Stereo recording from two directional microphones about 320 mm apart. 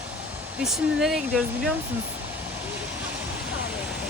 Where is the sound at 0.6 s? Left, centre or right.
Centre.